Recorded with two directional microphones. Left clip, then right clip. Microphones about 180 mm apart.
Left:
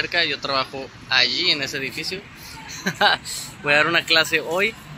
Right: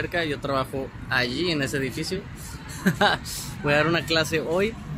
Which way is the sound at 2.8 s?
20° right (ahead or behind).